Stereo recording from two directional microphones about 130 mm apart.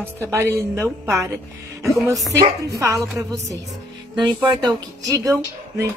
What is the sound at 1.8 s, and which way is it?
Speech, centre (ahead or behind).